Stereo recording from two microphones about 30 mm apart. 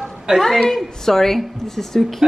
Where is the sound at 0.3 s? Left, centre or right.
Right.